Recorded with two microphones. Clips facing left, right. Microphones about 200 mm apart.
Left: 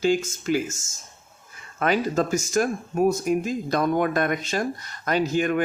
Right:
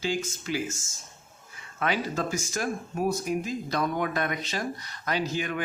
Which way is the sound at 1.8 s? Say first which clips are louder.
Left 6 dB; 45° left (ahead or behind).